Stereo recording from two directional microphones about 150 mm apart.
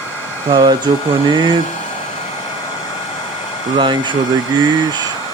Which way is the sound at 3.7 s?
30° right (ahead or behind).